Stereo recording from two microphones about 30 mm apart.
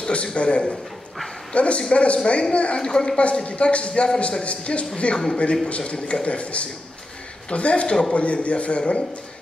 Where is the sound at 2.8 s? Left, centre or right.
Left.